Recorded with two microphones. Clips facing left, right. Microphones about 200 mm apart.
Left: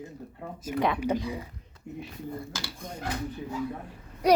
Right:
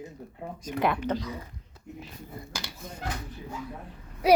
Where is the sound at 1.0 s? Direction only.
10° left (ahead or behind).